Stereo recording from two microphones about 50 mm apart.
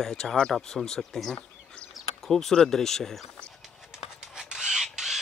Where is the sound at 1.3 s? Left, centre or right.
Left.